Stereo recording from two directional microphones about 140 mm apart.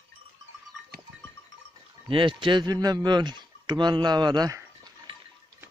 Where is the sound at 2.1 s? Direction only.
35° right (ahead or behind).